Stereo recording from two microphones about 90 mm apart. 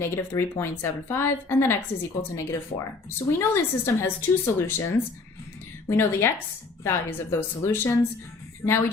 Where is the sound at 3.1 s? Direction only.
30° left (ahead or behind).